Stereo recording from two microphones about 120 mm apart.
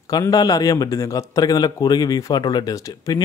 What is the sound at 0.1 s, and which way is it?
A man's voice, 30° left (ahead or behind).